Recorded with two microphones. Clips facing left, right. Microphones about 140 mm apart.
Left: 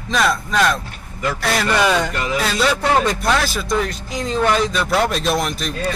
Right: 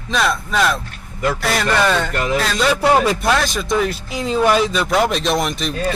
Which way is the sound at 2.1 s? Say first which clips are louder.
Right 3 dB; 50° right (ahead or behind).